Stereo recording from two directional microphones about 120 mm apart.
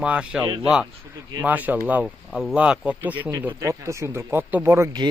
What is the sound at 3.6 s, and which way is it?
Speech, 25° right (ahead or behind).